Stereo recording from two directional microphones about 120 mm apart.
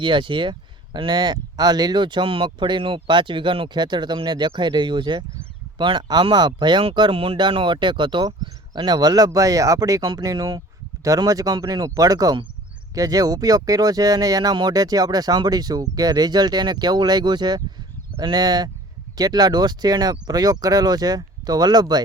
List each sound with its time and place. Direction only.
0.0 s speech: 40° right (ahead or behind)